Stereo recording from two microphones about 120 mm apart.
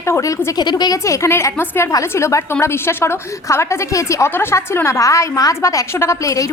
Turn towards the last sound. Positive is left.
turn(degrees=25)  # may be behind; listen again after turning